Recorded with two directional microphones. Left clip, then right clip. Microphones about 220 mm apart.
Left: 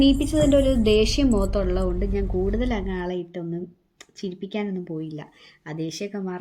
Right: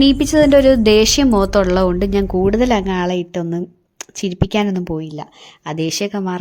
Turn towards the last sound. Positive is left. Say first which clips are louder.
# right 10 dB
turn(degrees=-45)  # may be behind; listen again after turning